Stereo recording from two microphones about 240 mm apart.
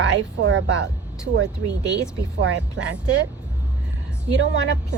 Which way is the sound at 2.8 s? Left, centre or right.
Right.